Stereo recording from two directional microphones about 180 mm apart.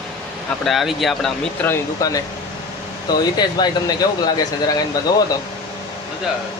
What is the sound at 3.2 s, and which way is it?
Speech, 25° left (ahead or behind).